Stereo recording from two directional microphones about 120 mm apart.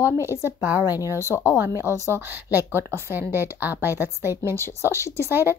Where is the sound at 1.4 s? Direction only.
20° right (ahead or behind).